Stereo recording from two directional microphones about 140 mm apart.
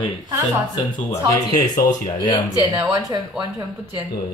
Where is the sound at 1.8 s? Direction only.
60° left (ahead or behind).